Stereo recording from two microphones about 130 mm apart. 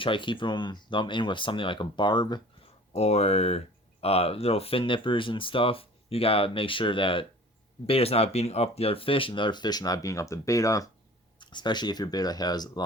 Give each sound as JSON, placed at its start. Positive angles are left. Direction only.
{"t": 0.0, "sound": "speech", "side_deg": 40}
{"t": 2.9, "sound": "speech", "side_deg": 55}